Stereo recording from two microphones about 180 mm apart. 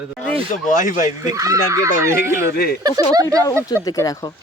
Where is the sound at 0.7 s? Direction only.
50° left (ahead or behind).